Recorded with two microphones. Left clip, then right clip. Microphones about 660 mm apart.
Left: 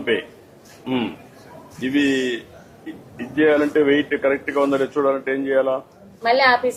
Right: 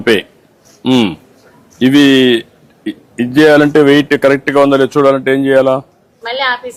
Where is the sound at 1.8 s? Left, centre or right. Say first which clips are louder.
Right 12 dB; right.